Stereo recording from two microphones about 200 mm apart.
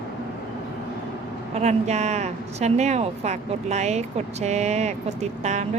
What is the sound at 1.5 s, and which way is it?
Speech, 35° right (ahead or behind).